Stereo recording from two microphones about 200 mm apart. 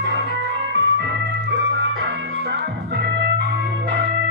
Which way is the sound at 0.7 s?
55° right (ahead or behind).